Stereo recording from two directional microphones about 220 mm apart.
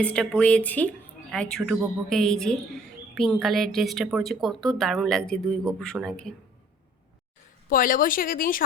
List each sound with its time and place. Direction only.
0.0 s a woman's voice: 5° left (ahead or behind)
7.7 s speech: 40° left (ahead or behind)